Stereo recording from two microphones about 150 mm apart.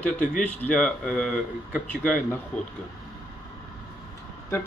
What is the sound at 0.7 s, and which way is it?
Speech, 5° left (ahead or behind).